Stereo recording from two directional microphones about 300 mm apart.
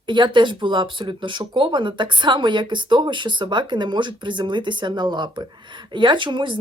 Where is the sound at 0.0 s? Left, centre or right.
Centre.